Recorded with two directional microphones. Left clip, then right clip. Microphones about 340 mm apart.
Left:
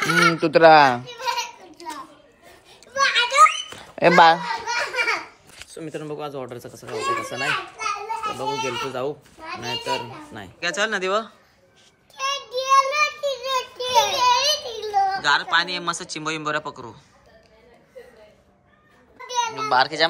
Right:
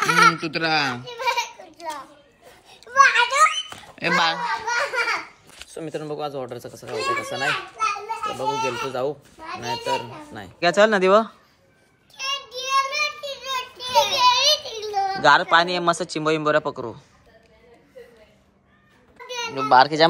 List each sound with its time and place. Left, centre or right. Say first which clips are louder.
0.0 s children playing: right 2 dB; centre
2.4 s a sound: right 4 dB; centre
5.8 s a child's voice: right 2 dB; centre
10.6 s speech: right 7 dB; centre
12.2 s child singing: left 3 dB; centre
13.2 s a sound: left 4 dB; centre
15.2 s a child's voice: right 4 dB; centre
19.5 s a child's voice: right 6 dB; centre